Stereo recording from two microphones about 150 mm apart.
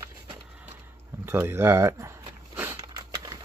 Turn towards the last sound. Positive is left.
turn(degrees=-15)  # may be behind; listen again after turning